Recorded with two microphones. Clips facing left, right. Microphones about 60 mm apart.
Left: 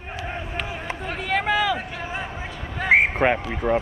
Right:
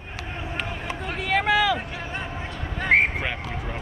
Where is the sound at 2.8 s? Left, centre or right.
Centre.